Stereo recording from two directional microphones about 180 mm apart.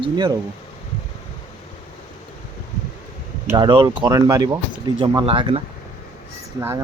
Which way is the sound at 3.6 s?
25° right (ahead or behind).